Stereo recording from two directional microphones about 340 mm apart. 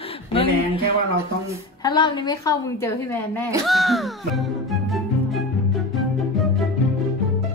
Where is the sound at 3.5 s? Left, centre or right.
Centre.